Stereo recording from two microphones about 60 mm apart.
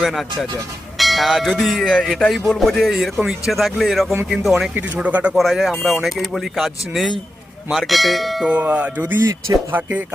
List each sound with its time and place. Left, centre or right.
0.0 s speech: centre
4.9 s speech: right
5.3 s speech: centre
8.6 s music: right